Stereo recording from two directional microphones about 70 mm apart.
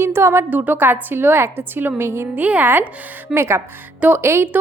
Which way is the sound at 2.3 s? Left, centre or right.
Right.